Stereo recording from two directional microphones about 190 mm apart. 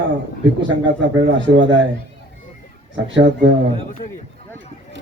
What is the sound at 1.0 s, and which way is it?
Speech, 75° right (ahead or behind).